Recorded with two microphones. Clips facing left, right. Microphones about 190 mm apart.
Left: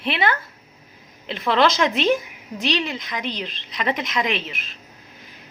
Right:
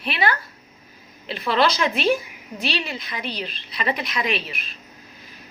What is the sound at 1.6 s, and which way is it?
A woman's voice, 20° left (ahead or behind).